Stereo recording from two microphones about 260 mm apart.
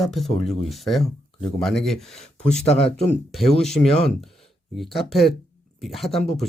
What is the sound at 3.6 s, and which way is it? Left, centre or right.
Speech, centre.